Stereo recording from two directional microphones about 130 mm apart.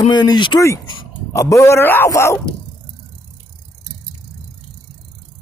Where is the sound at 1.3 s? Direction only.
25° left (ahead or behind).